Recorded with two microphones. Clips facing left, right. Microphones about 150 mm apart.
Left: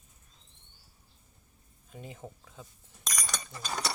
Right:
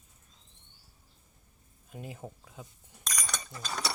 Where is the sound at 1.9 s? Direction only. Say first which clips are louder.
Right 2 dB; 5° right (ahead or behind).